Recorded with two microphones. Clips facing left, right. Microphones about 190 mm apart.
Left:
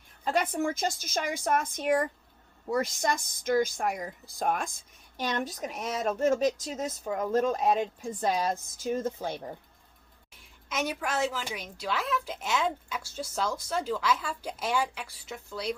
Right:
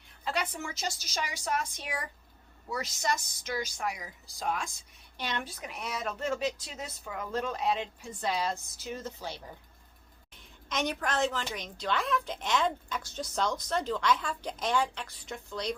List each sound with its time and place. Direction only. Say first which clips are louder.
0.3 s a woman's voice: left 7 dB; 50° left (ahead or behind)
10.7 s a woman's voice: even; 5° left (ahead or behind)